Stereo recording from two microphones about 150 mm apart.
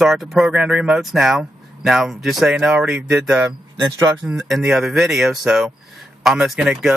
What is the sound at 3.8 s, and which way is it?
Speech, 20° right (ahead or behind).